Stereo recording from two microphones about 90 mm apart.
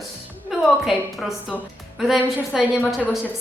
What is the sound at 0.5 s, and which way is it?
A woman's voice, 5° right (ahead or behind).